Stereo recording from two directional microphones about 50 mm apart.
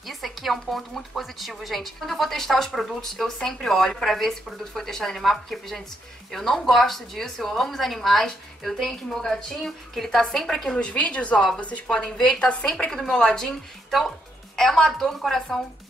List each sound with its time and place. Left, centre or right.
0.0 s a woman's voice: centre
10.7 s a woman's voice: left
12.9 s a woman's voice: centre